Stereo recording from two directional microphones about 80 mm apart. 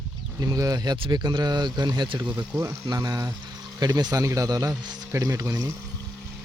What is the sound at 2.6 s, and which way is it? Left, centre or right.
A man's voice, right.